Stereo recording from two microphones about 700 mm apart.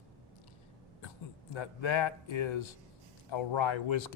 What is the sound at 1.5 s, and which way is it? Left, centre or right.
Speech, left.